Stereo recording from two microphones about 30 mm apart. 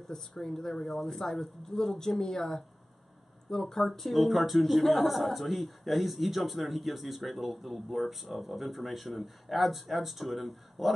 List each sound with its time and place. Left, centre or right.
0.0 s speech: centre
0.8 s speech: centre